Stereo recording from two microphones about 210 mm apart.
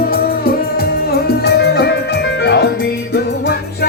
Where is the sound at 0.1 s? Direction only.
45° left (ahead or behind).